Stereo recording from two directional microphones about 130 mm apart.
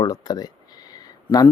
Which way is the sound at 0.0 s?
30° left (ahead or behind).